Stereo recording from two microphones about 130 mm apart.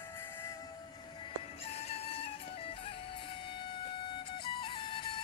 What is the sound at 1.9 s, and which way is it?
Music, 50° left (ahead or behind).